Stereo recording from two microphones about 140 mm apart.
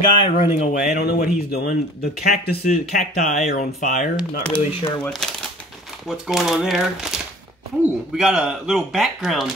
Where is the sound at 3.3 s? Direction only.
55° left (ahead or behind).